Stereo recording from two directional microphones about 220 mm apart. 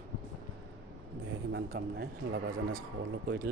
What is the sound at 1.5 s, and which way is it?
Speech, 50° right (ahead or behind).